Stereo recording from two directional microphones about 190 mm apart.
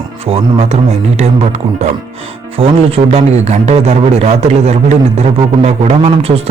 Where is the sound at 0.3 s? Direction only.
30° right (ahead or behind).